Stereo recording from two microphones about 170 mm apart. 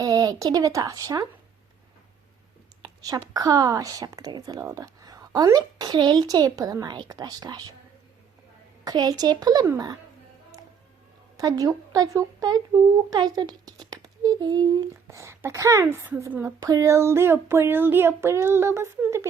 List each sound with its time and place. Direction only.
0.0 s speech: 20° right (ahead or behind)
2.8 s speech: 20° right (ahead or behind)
8.8 s speech: 20° right (ahead or behind)
11.3 s speech: 20° right (ahead or behind)